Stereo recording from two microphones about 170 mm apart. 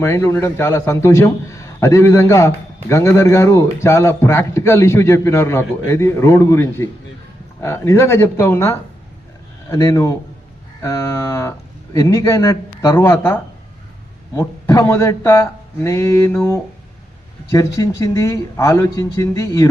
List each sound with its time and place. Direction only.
0.0 s a man's voice: 15° left (ahead or behind)